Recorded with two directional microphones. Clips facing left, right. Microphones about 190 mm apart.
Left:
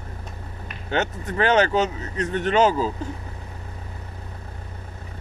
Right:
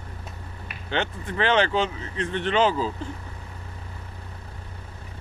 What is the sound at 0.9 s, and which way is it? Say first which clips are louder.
Speech: left 3 dB; 40° left (ahead or behind).